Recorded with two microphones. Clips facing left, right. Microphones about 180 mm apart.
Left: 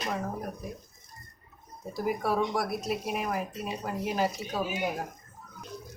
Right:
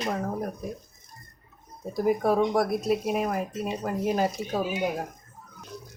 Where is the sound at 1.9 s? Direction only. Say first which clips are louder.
Right 6 dB; 50° right (ahead or behind).